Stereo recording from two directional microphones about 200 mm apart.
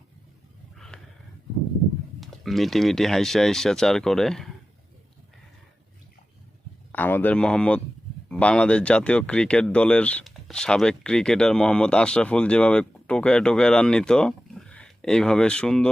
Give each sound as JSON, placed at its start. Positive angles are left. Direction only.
{"t": 0.9, "sound": "a sound", "side_deg": 5}
{"t": 2.2, "sound": "speech", "side_deg": 0}
{"t": 6.9, "sound": "speech", "side_deg": 10}